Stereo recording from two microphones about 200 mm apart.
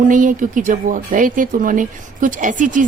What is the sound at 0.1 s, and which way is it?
A woman's voice, 40° right (ahead or behind).